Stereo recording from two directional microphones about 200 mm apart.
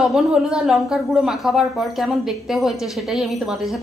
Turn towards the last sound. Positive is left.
turn(degrees=0)  # may be behind; listen again after turning